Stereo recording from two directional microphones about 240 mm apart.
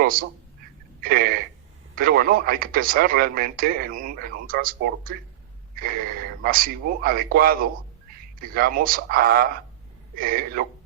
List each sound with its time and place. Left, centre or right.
0.0 s speech: right